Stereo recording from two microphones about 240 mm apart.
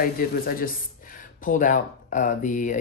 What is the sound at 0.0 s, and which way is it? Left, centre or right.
Speech, left.